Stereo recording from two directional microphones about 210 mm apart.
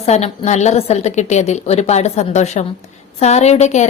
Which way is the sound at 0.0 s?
30° left (ahead or behind).